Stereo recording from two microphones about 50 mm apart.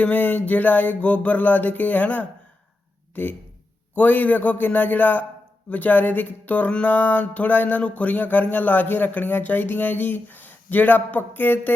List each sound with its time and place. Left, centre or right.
0.0 s speech: left
6.7 s speech: left